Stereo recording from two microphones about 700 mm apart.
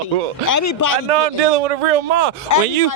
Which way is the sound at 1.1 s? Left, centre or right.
Right.